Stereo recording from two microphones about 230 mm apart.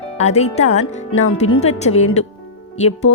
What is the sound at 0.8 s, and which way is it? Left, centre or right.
Speech, left.